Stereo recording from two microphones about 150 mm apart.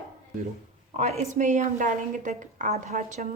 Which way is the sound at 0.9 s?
50° right (ahead or behind).